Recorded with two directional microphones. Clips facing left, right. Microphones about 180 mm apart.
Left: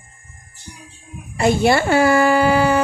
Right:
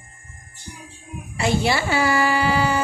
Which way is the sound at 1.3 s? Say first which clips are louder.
Left 6 dB; 50° left (ahead or behind).